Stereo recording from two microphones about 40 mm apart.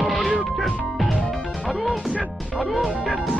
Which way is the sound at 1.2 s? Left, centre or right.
Left.